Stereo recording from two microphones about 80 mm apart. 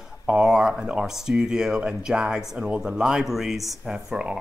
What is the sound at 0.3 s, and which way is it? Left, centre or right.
Speech, centre.